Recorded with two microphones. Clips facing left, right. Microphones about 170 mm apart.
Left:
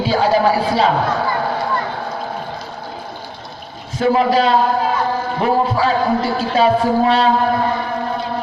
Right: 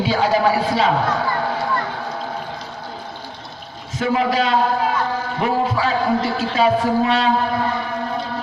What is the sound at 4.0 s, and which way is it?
A man's voice, 35° left (ahead or behind).